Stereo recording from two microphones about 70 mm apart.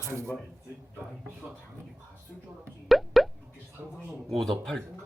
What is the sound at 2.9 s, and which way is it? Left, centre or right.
Plop, centre.